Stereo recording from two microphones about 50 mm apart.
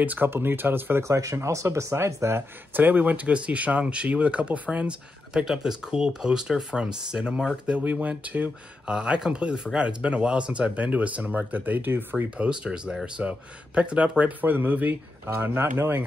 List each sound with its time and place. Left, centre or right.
0.0 s speech: right
0.3 s speech: right
1.0 s speech: right
2.7 s speech: right
5.3 s speech: centre; by 8.9 s right
8.9 s speech: centre; by 12.3 s right
12.4 s speech: centre
14.4 s speech: right